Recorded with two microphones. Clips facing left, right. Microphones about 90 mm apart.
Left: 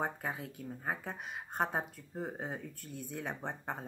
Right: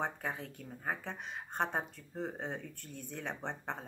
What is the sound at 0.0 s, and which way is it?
Speech, 5° left (ahead or behind).